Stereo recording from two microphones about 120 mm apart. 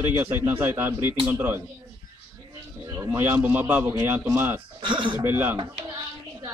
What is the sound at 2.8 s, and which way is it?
A man's voice, 25° right (ahead or behind).